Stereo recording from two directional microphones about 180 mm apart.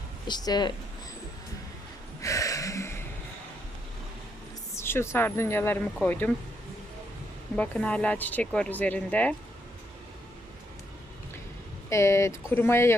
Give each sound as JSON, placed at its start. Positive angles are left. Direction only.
{"t": 0.3, "sound": "speech", "side_deg": 25}
{"t": 2.2, "sound": "a sound", "side_deg": 20}
{"t": 4.7, "sound": "speech", "side_deg": 15}
{"t": 7.5, "sound": "speech", "side_deg": 5}
{"t": 11.9, "sound": "speech", "side_deg": 15}